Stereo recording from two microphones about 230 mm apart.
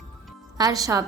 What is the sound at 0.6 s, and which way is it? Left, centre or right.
Speech, centre.